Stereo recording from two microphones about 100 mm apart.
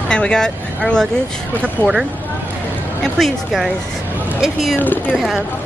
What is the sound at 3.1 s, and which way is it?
A woman's voice, centre (ahead or behind).